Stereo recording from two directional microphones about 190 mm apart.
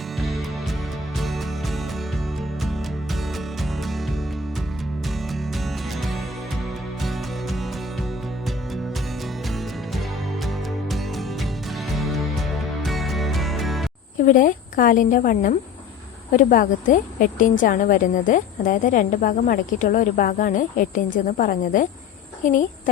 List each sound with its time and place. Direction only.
1.2 s music: centre (ahead or behind)
3.3 s music: centre (ahead or behind)
5.3 s music: centre (ahead or behind)
10.4 s music: centre (ahead or behind)
14.2 s a woman's voice: 45° left (ahead or behind)